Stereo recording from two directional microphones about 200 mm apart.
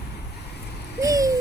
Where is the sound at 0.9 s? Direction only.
15° right (ahead or behind).